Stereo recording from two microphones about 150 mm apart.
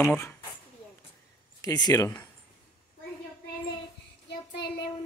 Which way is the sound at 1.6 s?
25° left (ahead or behind).